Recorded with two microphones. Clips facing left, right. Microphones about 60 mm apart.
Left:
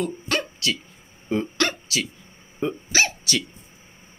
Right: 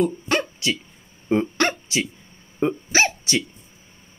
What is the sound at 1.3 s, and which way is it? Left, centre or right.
Hiccup, right.